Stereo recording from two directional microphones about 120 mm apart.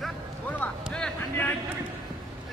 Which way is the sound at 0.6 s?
5° left (ahead or behind).